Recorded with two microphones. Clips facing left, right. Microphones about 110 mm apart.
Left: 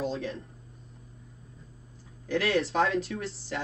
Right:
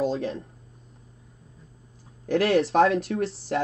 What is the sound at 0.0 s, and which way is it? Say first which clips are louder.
Speech: right 6 dB; 30° right (ahead or behind).